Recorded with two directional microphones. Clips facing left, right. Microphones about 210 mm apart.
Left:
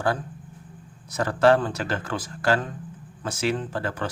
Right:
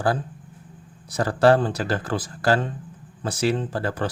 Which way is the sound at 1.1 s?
35° right (ahead or behind).